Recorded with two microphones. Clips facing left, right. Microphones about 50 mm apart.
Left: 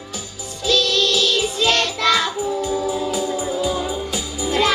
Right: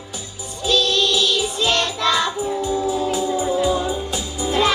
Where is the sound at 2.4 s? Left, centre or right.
Left.